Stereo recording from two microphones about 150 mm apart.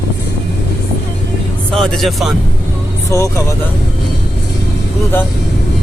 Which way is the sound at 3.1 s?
20° left (ahead or behind).